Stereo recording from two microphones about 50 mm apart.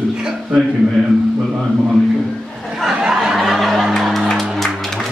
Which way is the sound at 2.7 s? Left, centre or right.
Centre.